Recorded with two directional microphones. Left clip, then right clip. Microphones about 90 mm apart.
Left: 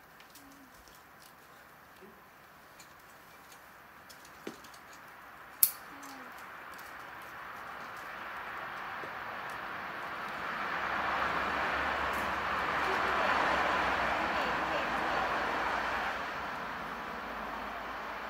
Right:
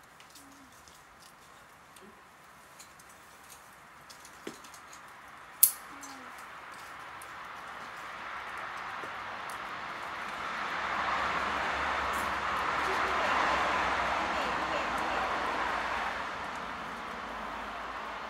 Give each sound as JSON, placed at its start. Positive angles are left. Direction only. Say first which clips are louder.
{"t": 8.2, "sound": "vehicle", "louder": "right 2 dB", "side_deg": 30}